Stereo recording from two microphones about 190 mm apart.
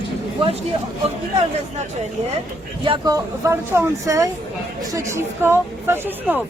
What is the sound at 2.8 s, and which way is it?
Speech, 20° right (ahead or behind).